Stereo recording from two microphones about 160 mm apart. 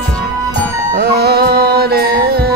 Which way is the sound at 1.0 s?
80° right.